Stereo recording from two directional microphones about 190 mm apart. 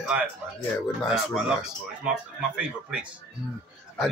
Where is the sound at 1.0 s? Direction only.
Centre (ahead or behind).